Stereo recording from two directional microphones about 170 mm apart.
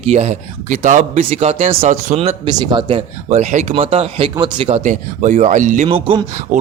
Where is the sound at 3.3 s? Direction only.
45° right (ahead or behind).